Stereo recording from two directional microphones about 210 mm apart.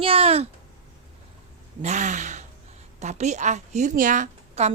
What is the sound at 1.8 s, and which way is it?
A woman's voice, 35° right (ahead or behind).